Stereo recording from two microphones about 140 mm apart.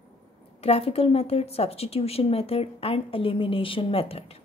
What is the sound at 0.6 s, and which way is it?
A woman's voice, 45° left (ahead or behind).